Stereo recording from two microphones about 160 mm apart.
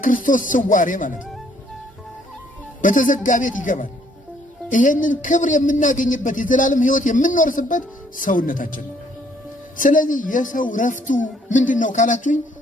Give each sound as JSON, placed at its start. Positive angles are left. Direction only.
{"t": 0.0, "sound": "a man's voice", "side_deg": 55}
{"t": 2.8, "sound": "a man's voice", "side_deg": 55}